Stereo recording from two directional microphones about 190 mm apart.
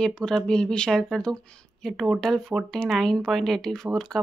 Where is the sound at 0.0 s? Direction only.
5° left (ahead or behind).